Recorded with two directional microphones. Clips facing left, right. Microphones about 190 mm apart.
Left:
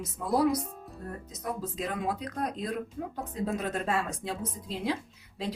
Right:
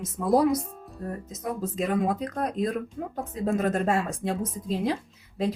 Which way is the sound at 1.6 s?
45° right (ahead or behind).